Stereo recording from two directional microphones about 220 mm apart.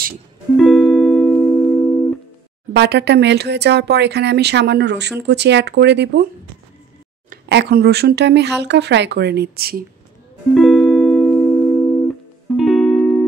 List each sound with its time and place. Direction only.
0.6 s music: centre (ahead or behind)
2.7 s speech: 50° right (ahead or behind)
7.4 s speech: 50° right (ahead or behind)
10.5 s music: centre (ahead or behind)